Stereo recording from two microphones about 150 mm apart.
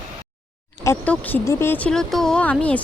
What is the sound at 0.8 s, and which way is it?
Speech, 10° left (ahead or behind).